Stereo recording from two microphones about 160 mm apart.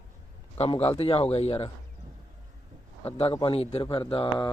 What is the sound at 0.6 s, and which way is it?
Speech, 40° left (ahead or behind).